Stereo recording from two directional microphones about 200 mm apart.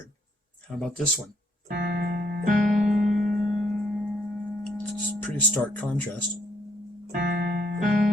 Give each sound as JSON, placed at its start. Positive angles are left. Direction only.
{"t": 0.8, "sound": "speech", "side_deg": 5}
{"t": 1.6, "sound": "keyboard", "side_deg": -55}
{"t": 2.6, "sound": "music", "side_deg": 0}
{"t": 7.1, "sound": "music", "side_deg": -50}